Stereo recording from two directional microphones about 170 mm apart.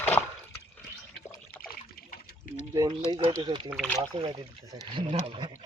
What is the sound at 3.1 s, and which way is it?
Speech, 25° right (ahead or behind).